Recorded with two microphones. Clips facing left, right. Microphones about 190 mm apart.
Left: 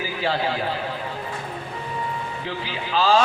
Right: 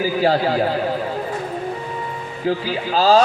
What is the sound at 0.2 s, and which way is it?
Speech, 40° right (ahead or behind).